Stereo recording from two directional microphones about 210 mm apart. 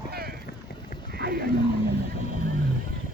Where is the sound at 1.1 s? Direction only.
50° right (ahead or behind).